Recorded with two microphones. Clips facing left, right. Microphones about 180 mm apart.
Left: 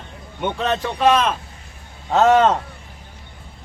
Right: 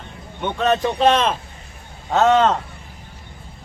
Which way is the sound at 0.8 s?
25° right (ahead or behind).